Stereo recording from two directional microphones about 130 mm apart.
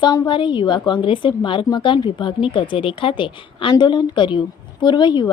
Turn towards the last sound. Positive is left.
turn(degrees=35)  # may be behind; listen again after turning